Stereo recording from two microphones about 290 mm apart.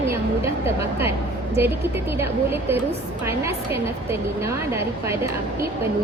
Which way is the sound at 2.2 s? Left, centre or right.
Centre.